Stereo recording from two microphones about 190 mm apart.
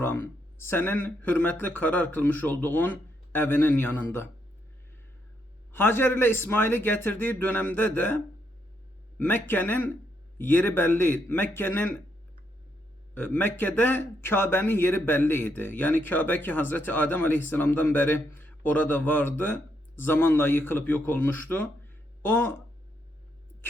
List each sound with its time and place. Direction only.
0.0 s speech: 10° left (ahead or behind)
5.7 s speech: 10° left (ahead or behind)
13.1 s speech: 10° left (ahead or behind)